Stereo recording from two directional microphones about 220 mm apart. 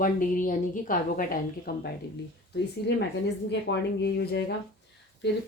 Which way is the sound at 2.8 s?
50° left (ahead or behind).